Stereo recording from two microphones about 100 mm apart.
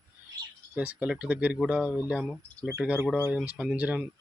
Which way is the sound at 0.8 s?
15° right (ahead or behind).